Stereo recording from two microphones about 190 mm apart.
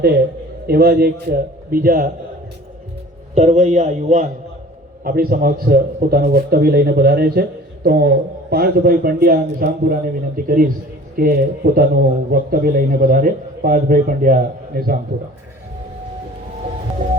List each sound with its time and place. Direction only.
0.7 s a man's voice: 55° right (ahead or behind)
3.3 s a man's voice: 40° right (ahead or behind)
5.0 s a man's voice: 50° right (ahead or behind)